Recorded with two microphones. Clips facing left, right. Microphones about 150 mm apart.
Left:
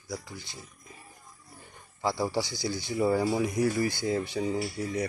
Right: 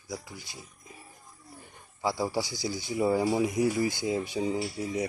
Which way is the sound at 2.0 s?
10° right (ahead or behind).